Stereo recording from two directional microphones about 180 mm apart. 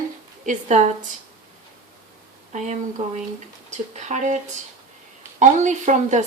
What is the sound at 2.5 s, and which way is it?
A woman's voice, 40° right (ahead or behind).